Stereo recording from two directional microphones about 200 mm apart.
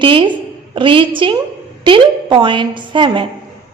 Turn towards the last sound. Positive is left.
turn(degrees=-25)  # may be behind; listen again after turning